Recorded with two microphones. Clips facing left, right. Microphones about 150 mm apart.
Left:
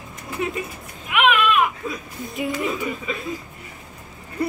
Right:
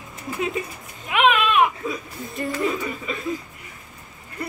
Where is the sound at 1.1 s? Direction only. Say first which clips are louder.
Even; 30° right (ahead or behind).